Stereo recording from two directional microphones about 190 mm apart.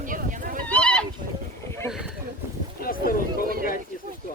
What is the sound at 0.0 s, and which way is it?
Horse, 45° right (ahead or behind).